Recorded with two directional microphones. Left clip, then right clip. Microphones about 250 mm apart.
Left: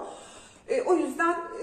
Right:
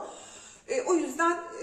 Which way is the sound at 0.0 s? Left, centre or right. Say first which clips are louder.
Left 1 dB; centre.